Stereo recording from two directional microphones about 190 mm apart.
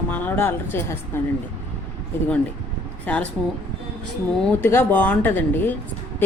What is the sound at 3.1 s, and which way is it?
Speech, 5° left (ahead or behind).